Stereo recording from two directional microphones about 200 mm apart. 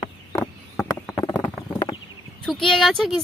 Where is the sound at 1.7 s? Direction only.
20° left (ahead or behind).